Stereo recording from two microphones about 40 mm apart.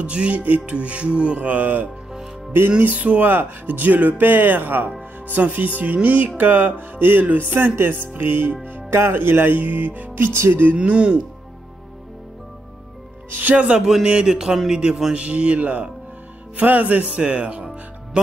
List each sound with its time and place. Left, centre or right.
0.0 s speech: right
1.5 s speech: right
3.3 s speech: right
7.0 s music: right
7.2 s speech: right
7.7 s music: right
8.6 s music: right
9.6 s speech: right
10.1 s speech: right
10.8 s speech: right
13.3 s speech: right
13.6 s speech: centre
15.1 s speech: right
17.2 s speech: right